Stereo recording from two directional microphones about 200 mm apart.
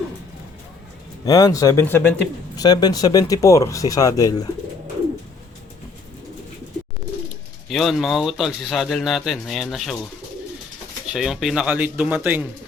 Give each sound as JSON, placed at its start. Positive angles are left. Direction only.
{"t": 1.2, "sound": "speech", "side_deg": 20}
{"t": 7.7, "sound": "a man's voice", "side_deg": 0}
{"t": 11.1, "sound": "a man's voice", "side_deg": -5}